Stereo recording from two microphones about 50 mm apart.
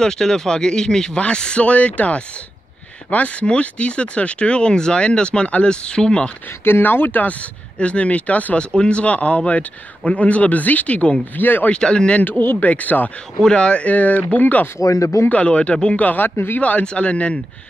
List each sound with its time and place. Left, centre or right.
0.0 s speech: centre
6.6 s speech: left
7.8 s speech: left
8.5 s speech: left
11.3 s speech: left
11.7 s speech: centre
12.2 s speech: left
13.4 s speech: centre; by 14.7 s left
14.8 s speech: left
15.2 s speech: left
16.0 s speech: left
16.3 s speech: left
16.8 s speech: left